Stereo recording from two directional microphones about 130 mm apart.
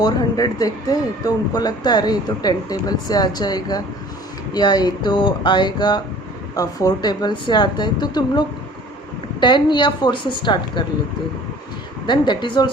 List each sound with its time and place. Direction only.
0.0 s speech: 30° left (ahead or behind)
12.0 s speech: 35° left (ahead or behind)